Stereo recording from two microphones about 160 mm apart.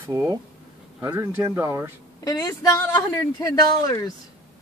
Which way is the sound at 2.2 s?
20° left (ahead or behind).